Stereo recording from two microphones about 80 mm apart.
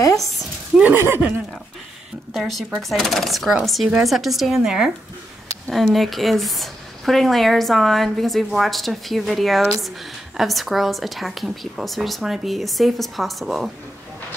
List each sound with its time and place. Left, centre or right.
0.9 s speech: right
2.3 s speech: centre